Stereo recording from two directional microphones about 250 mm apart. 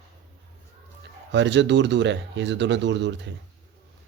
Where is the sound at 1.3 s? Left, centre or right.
Right.